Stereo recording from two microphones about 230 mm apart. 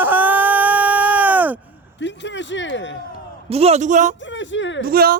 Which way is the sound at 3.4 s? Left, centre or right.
Right.